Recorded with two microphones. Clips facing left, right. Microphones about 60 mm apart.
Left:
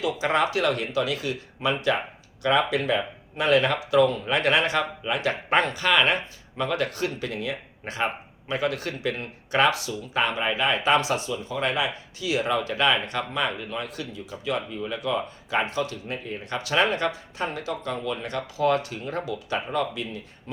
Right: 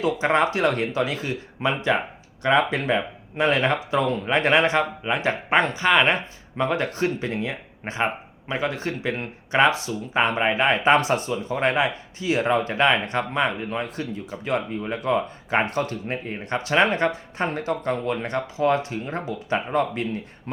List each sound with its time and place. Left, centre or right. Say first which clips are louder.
0.0 s speech: right 3 dB; right